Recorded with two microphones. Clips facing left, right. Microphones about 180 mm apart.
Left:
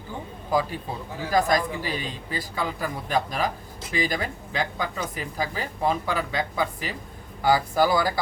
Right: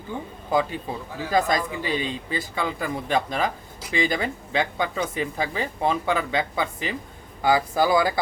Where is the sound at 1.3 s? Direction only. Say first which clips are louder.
Even; 25° right (ahead or behind).